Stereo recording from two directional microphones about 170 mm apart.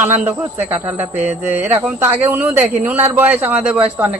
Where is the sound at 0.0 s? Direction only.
10° right (ahead or behind).